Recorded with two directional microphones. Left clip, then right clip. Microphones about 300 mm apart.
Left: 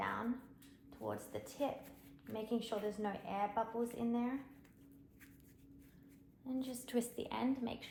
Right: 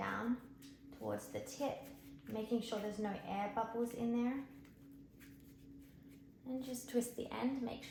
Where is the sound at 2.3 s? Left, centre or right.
Centre.